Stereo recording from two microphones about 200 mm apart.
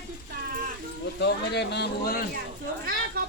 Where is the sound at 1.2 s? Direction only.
55° left (ahead or behind).